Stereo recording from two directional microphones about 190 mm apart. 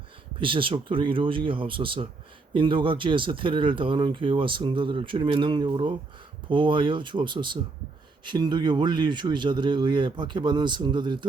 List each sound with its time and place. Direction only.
0.3 s speech: 25° right (ahead or behind)